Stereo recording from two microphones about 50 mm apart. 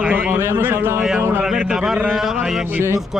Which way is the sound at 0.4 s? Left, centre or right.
Right.